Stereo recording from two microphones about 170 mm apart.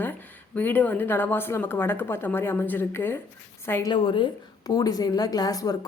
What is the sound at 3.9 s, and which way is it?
Speech, 30° left (ahead or behind).